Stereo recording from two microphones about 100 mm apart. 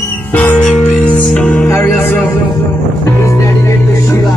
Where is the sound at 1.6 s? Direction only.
25° left (ahead or behind).